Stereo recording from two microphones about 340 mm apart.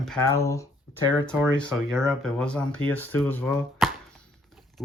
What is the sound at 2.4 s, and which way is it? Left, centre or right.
Speech, centre.